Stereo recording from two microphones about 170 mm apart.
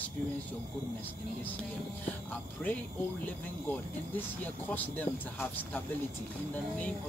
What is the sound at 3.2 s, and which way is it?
Speech, 10° left (ahead or behind).